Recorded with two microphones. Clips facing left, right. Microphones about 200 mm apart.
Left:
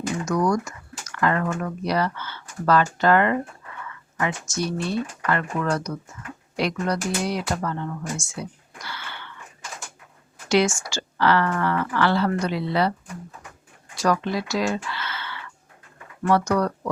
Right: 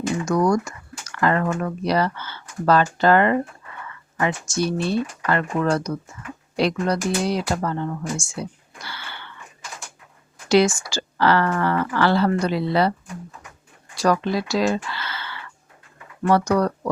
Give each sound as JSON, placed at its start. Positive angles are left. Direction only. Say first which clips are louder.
{"t": 0.3, "sound": "speech", "louder": "right 3 dB", "side_deg": -30}
{"t": 8.2, "sound": "a sound", "louder": "right 3 dB", "side_deg": -30}
{"t": 10.5, "sound": "speech", "louder": "right 3 dB", "side_deg": -35}
{"t": 13.9, "sound": "speech", "louder": "right 3 dB", "side_deg": -35}